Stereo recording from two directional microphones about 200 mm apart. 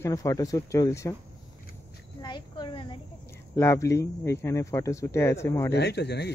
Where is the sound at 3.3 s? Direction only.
15° left (ahead or behind).